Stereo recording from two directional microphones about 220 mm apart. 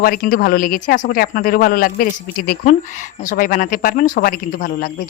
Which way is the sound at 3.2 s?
40° left (ahead or behind).